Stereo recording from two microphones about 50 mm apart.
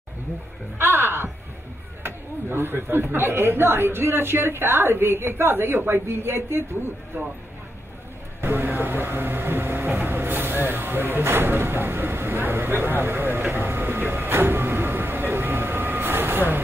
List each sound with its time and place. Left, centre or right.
0.7 s music: right
2.0 s speech: right
7.1 s speech: right
8.4 s a sound: right